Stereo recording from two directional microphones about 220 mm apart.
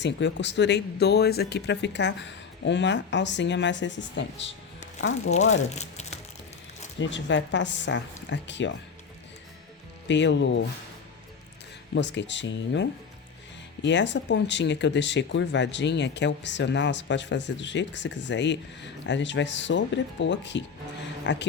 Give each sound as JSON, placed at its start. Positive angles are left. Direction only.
{"t": 0.0, "sound": "speech", "side_deg": 55}
{"t": 4.9, "sound": "speech", "side_deg": 65}
{"t": 5.7, "sound": "crumpling", "side_deg": 30}
{"t": 7.0, "sound": "speech", "side_deg": 55}
{"t": 10.1, "sound": "speech", "side_deg": 55}
{"t": 11.9, "sound": "speech", "side_deg": 50}